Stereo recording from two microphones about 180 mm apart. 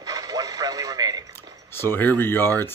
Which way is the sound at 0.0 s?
20° right (ahead or behind).